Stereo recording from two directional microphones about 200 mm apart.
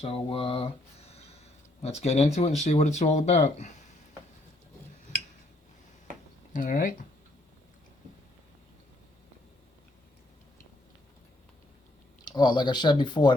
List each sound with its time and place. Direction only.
0.0 s speech: 30° left (ahead or behind)
6.5 s speech: 40° left (ahead or behind)
12.2 s speech: 20° left (ahead or behind)